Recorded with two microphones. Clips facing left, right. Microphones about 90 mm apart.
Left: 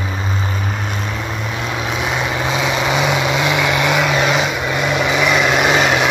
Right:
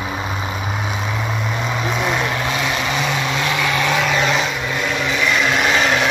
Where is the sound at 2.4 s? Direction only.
20° left (ahead or behind).